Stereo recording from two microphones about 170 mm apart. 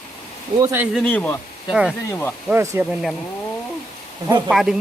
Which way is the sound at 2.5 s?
10° right (ahead or behind).